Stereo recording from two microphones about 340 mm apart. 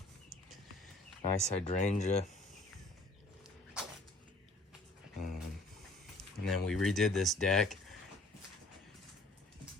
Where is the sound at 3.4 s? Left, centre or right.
Centre.